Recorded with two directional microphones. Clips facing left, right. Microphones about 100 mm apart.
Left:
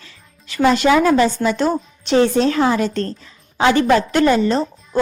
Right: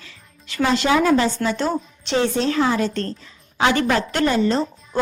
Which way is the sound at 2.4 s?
40° left (ahead or behind).